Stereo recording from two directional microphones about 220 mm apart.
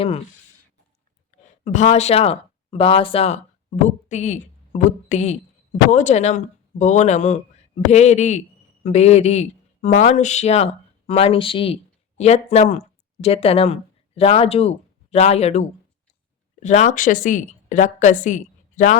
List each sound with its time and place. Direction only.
1.6 s a woman's voice: 30° left (ahead or behind)